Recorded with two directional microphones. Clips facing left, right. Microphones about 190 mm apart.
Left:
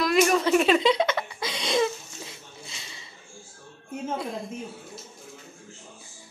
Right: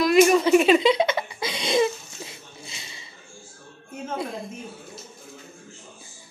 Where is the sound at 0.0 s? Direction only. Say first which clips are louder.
Right 5 dB; 5° right (ahead or behind).